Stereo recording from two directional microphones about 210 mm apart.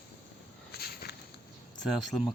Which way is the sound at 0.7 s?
45° left (ahead or behind).